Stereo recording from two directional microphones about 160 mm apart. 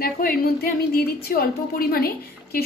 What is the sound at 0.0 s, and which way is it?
A woman's voice, 70° left (ahead or behind).